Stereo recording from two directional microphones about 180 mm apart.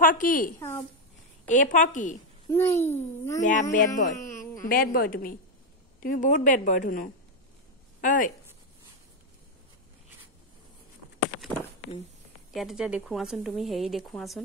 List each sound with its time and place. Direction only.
0.0 s a woman's voice: 50° left (ahead or behind)
0.6 s a child's voice: 15° left (ahead or behind)
1.5 s a woman's voice: 45° left (ahead or behind)
2.5 s a child's voice: 15° left (ahead or behind)
3.3 s a woman's voice: 45° left (ahead or behind)
4.3 s a sound: 15° left (ahead or behind)
4.6 s a woman's voice: 55° left (ahead or behind)
12.5 s speech: 5° right (ahead or behind)